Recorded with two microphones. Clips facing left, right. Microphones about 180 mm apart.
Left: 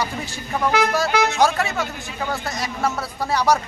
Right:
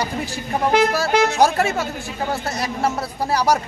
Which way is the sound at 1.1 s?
35° right (ahead or behind).